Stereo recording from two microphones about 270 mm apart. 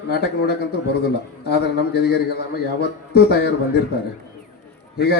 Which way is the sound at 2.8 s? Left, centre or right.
Left.